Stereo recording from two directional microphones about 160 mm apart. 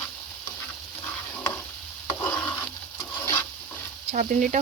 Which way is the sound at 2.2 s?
10° left (ahead or behind).